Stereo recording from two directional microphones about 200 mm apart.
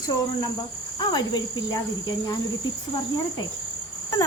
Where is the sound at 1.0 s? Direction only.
20° left (ahead or behind).